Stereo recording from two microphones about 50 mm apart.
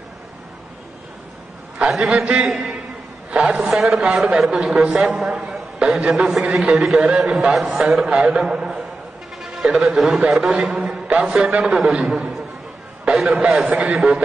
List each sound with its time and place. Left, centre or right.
2.0 s a man's voice: right
2.4 s a man's voice: centre
3.3 s a man's voice: right
3.6 s a man's voice: centre
9.4 s a sound: centre
9.7 s a man's voice: centre
9.9 s a man's voice: centre
13.7 s a man's voice: right